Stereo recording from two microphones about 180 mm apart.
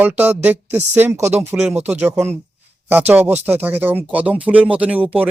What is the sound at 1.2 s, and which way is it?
Speech, 35° right (ahead or behind).